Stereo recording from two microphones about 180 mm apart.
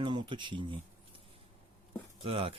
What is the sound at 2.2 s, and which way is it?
Speech, 35° right (ahead or behind).